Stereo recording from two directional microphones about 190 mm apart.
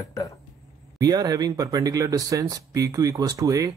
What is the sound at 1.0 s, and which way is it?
Speech, 20° right (ahead or behind).